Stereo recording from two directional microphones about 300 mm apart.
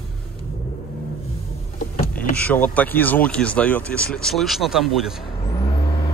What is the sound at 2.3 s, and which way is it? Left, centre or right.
Speech, centre.